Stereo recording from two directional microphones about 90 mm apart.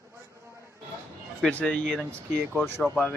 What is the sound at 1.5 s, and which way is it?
Speech, 15° left (ahead or behind).